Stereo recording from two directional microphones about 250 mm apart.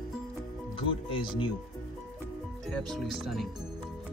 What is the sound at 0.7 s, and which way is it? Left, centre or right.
Speech, left.